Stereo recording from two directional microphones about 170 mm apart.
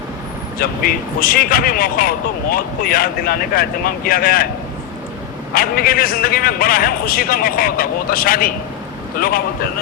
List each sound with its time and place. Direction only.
0.6 s speech: 60° left (ahead or behind)
5.5 s speech: 60° left (ahead or behind)